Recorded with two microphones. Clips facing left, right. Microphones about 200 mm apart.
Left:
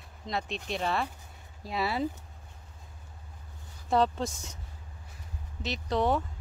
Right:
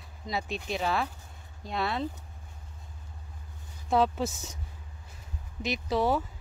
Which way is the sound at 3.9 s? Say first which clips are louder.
Right 1 dB; 5° right (ahead or behind).